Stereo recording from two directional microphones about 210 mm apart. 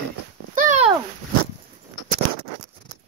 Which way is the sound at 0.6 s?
35° right (ahead or behind).